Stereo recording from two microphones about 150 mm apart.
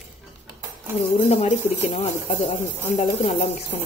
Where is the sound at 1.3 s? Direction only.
50° left (ahead or behind).